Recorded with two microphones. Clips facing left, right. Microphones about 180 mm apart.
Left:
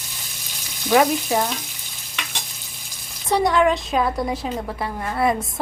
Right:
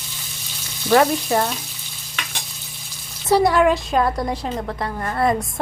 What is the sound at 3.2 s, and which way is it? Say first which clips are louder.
A woman's voice: right 2 dB; 5° right (ahead or behind).